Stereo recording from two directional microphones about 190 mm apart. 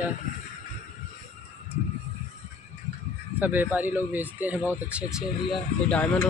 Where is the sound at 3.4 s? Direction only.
10° right (ahead or behind).